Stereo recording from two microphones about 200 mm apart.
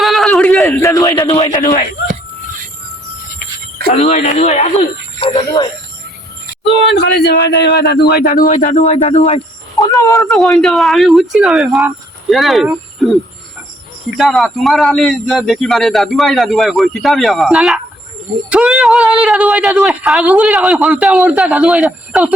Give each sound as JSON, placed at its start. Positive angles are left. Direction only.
{"t": 0.0, "sound": "a sound", "side_deg": 0}
{"t": 0.6, "sound": "a sound", "side_deg": 15}
{"t": 1.3, "sound": "speech", "side_deg": 30}
{"t": 3.9, "sound": "speech", "side_deg": 35}
{"t": 6.7, "sound": "speech", "side_deg": 60}
{"t": 9.8, "sound": "speech", "side_deg": 15}
{"t": 10.2, "sound": "speech", "side_deg": 0}
{"t": 14.2, "sound": "speech", "side_deg": 0}